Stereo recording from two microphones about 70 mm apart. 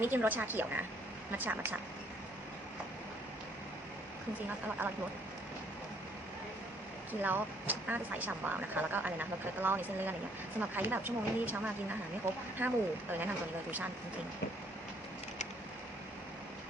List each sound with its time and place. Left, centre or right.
0.0 s speech: right
7.1 s speech: right
12.5 s speech: right